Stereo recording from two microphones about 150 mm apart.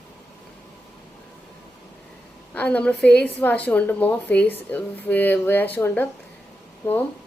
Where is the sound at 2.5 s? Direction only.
10° left (ahead or behind).